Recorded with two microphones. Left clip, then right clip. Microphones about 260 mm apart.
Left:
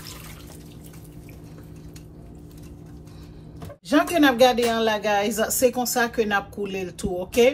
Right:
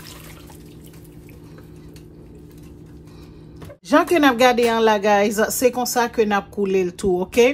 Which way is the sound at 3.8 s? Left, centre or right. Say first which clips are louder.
Right 4 dB; right.